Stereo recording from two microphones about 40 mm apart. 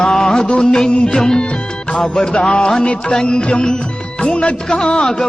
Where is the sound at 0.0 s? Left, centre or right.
Centre.